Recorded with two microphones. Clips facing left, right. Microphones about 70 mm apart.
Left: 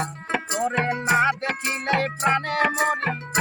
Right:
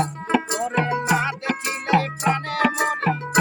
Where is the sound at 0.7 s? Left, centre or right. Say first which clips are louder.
Right 1 dB; left.